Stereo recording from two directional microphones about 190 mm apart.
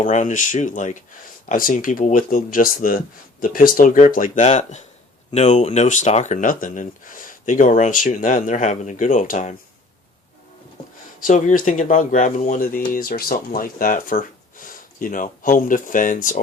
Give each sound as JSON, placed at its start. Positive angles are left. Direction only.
{"t": 0.0, "sound": "speech", "side_deg": 40}
{"t": 11.2, "sound": "speech", "side_deg": 40}